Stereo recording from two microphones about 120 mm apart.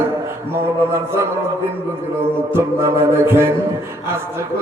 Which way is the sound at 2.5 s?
20° right (ahead or behind).